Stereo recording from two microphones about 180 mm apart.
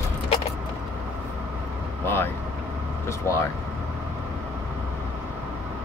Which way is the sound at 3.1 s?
15° left (ahead or behind).